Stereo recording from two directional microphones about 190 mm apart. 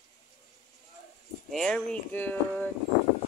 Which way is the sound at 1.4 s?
5° left (ahead or behind).